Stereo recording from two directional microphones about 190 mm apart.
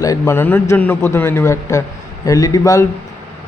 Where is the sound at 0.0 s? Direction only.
15° left (ahead or behind).